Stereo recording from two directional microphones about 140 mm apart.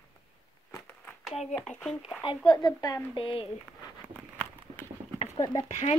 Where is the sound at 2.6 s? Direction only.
30° left (ahead or behind).